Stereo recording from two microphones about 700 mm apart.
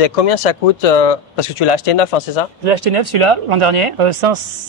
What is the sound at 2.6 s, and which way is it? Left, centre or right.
Speech, right.